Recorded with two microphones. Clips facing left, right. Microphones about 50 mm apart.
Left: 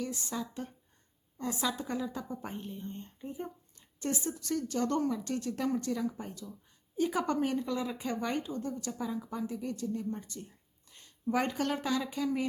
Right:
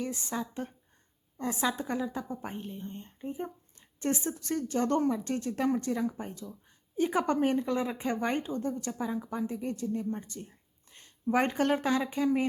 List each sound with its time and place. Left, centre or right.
0.0 s a woman's voice: right
2.0 s a woman's voice: centre; by 12.5 s right